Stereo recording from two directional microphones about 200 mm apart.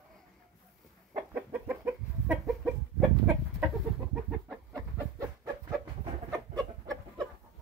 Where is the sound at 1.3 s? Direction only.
10° right (ahead or behind).